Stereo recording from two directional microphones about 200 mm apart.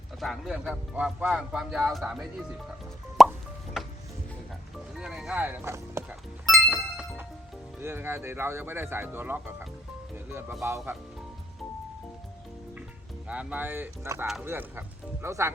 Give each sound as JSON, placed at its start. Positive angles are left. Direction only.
{"t": 0.2, "sound": "speech", "side_deg": 0}
{"t": 3.2, "sound": "plop", "side_deg": 0}
{"t": 3.8, "sound": "music", "side_deg": 0}
{"t": 4.9, "sound": "speech", "side_deg": 0}
{"t": 6.6, "sound": "music", "side_deg": 0}
{"t": 7.8, "sound": "speech", "side_deg": -10}
{"t": 13.2, "sound": "speech", "side_deg": -5}